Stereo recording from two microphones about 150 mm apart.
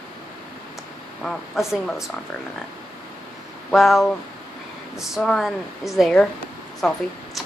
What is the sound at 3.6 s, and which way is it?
Speech, centre (ahead or behind).